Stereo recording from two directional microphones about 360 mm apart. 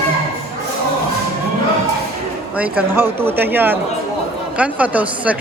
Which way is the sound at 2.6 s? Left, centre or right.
Centre.